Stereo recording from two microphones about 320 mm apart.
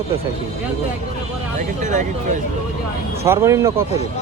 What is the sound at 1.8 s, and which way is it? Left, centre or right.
Speech, right.